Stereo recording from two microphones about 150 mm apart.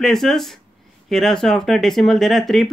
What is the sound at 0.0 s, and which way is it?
Speech, centre (ahead or behind).